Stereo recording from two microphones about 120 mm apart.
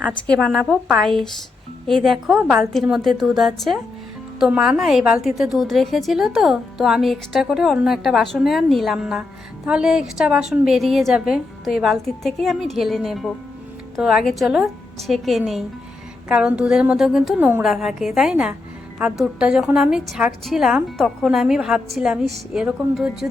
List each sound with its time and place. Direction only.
0.3 s a woman's voice: 5° left (ahead or behind)